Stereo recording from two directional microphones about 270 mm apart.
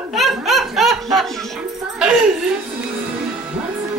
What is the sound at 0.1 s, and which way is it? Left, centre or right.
Snicker, centre.